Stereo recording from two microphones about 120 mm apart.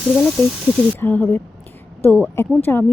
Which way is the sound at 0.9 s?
15° left (ahead or behind).